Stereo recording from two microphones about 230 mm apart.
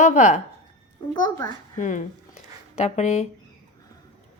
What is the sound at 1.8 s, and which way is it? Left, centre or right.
A woman's voice, left.